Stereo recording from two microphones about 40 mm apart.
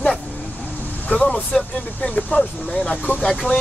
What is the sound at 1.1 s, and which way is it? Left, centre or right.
Speech, left.